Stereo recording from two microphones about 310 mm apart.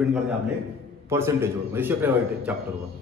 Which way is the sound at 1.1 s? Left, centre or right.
Centre.